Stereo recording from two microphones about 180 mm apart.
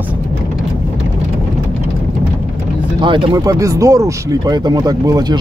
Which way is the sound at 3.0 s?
30° right (ahead or behind).